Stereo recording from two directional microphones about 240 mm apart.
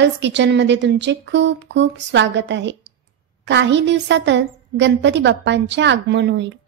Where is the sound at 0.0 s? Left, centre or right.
Right.